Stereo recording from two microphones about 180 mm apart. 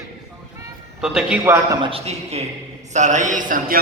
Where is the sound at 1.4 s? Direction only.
20° right (ahead or behind).